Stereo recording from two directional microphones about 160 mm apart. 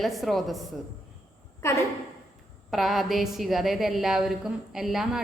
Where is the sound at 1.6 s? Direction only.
15° left (ahead or behind).